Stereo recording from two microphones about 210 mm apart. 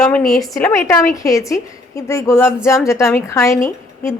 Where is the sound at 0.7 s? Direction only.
10° left (ahead or behind).